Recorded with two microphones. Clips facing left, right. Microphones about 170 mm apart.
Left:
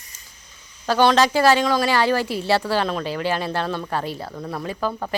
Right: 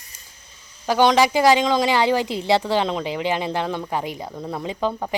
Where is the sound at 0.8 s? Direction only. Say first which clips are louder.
Even; 15° right (ahead or behind).